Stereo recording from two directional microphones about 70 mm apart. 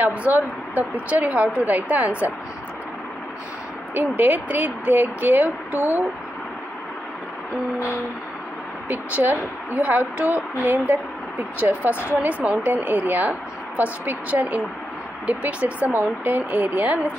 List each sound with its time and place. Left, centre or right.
0.0 s speech: right
3.9 s speech: right
8.8 s speech: right